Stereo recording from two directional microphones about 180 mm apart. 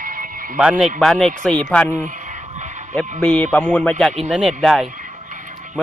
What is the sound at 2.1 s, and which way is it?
Vehicle, 45° right (ahead or behind).